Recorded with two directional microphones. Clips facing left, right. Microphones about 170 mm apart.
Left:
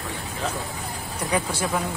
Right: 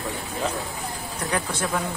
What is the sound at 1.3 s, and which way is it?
Speech, 10° left (ahead or behind).